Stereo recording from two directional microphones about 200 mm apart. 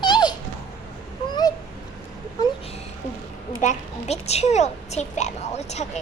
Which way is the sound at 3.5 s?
35° left (ahead or behind).